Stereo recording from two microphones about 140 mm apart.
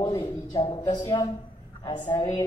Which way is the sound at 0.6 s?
40° left (ahead or behind).